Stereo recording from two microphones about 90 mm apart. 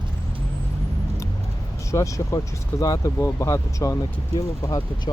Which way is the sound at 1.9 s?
35° left (ahead or behind).